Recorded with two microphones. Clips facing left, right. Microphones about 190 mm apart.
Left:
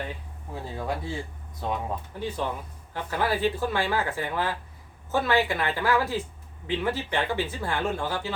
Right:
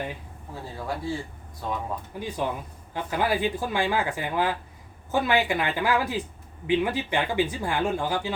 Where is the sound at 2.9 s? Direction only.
15° right (ahead or behind).